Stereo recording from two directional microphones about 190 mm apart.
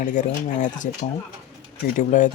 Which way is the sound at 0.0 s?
40° left (ahead or behind).